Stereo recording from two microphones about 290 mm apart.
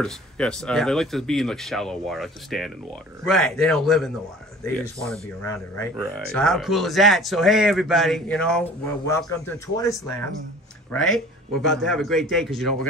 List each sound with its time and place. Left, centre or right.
0.0 s speech: centre